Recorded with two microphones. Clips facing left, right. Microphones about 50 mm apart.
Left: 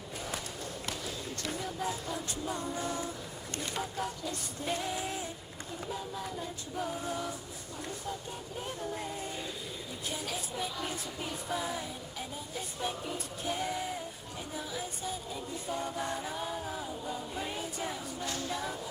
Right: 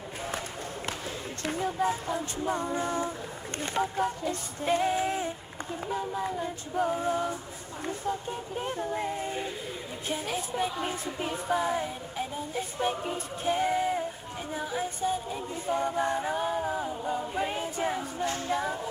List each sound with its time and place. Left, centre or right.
1.5 s music: right